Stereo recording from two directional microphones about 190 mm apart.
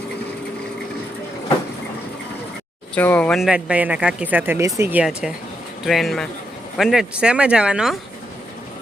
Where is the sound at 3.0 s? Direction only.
10° left (ahead or behind).